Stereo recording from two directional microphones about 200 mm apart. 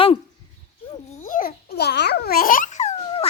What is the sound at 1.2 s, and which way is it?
Babbling, 40° left (ahead or behind).